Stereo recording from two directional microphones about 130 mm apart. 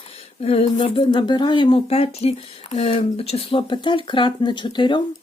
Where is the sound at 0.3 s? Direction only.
50° left (ahead or behind).